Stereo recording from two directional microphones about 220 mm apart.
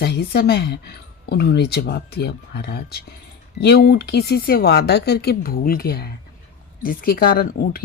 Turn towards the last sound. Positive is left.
turn(degrees=45)  # may be behind; listen again after turning